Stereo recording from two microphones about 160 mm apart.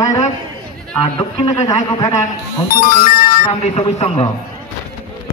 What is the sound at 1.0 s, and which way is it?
A man's voice, 35° left (ahead or behind).